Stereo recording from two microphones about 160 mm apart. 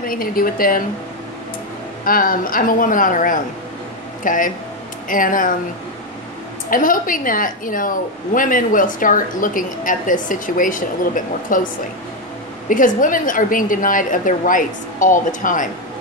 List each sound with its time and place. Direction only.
0.0 s a woman's voice: 65° left (ahead or behind)
2.0 s a woman's voice: 60° left (ahead or behind)
6.7 s a woman's voice: 60° left (ahead or behind)